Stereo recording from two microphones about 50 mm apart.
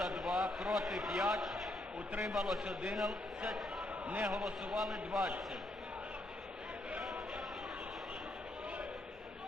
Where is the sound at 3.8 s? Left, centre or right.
Right.